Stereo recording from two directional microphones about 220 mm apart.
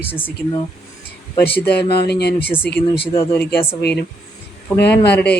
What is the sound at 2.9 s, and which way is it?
Speech, 25° left (ahead or behind).